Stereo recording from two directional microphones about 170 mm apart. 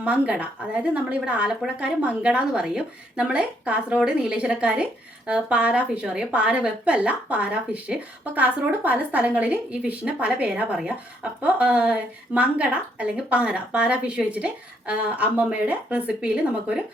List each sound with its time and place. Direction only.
0.0 s a woman's voice: 10° right (ahead or behind)